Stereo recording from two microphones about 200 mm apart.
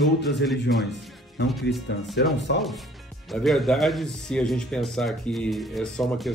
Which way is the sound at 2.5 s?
55° left (ahead or behind).